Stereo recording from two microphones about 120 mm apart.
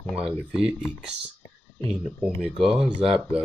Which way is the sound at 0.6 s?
5° right (ahead or behind).